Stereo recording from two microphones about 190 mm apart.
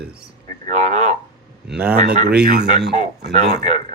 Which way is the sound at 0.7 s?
40° right (ahead or behind).